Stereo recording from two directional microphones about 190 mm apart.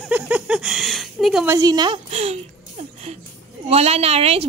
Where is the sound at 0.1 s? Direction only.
5° right (ahead or behind).